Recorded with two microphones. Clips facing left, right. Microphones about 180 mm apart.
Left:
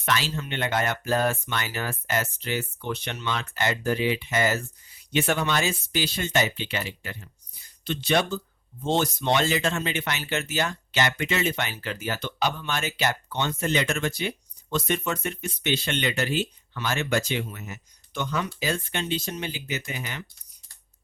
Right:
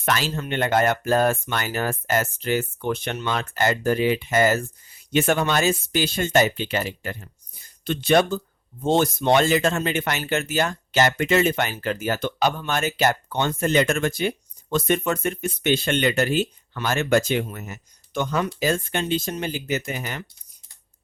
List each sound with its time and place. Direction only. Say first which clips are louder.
0.0 s speech: right 3 dB; 50° right (ahead or behind)